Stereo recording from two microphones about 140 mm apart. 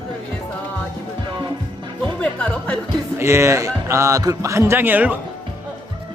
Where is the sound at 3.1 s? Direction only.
20° right (ahead or behind).